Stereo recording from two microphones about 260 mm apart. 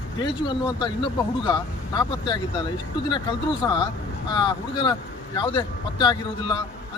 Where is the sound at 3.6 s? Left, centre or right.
Centre.